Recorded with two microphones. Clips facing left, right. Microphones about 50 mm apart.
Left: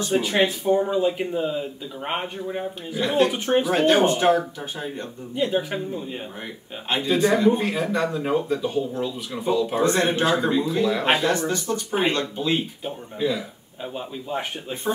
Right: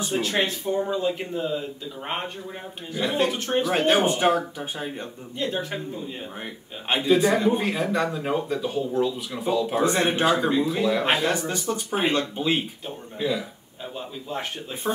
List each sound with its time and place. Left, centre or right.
0.1 s speech: centre
3.0 s speech: centre
3.3 s speech: centre
3.7 s speech: centre
5.3 s speech: centre
6.4 s speech: centre
11.3 s speech: centre
12.8 s speech: centre
14.3 s speech: centre